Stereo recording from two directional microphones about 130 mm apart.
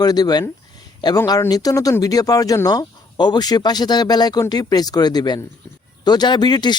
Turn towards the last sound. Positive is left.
turn(degrees=35)  # may be behind; listen again after turning